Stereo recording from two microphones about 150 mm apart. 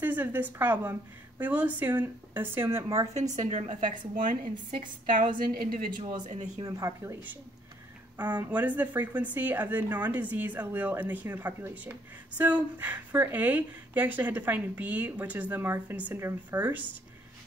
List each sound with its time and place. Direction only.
0.0 s speech: 10° right (ahead or behind)
3.4 s a woman's voice: 50° right (ahead or behind); by 5.9 s 75° right (ahead or behind)
6.2 s speech: 50° right (ahead or behind)
6.6 s speech: 20° right (ahead or behind)
8.2 s speech: 10° right (ahead or behind)